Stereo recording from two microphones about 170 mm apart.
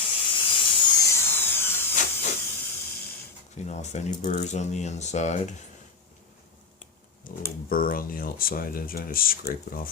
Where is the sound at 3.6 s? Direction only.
40° left (ahead or behind).